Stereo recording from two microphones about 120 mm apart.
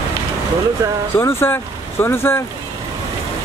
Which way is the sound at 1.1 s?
20° left (ahead or behind).